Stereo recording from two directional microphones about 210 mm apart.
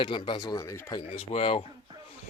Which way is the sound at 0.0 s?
25° left (ahead or behind).